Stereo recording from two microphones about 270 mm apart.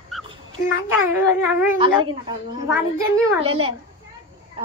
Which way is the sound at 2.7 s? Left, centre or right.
Centre.